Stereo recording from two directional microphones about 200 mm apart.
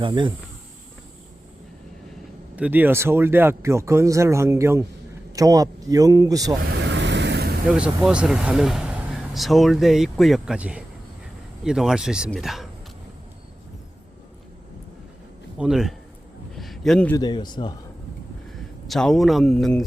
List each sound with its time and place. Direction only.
0.0 s speech: 25° right (ahead or behind)
2.6 s speech: 10° right (ahead or behind)
6.7 s vehicle: 60° right (ahead or behind)
7.7 s speech: 5° right (ahead or behind)
15.5 s speech: 5° right (ahead or behind)
16.6 s a sound: centre (ahead or behind)
17.2 s a man's voice: 20° left (ahead or behind)
18.5 s speech: centre (ahead or behind)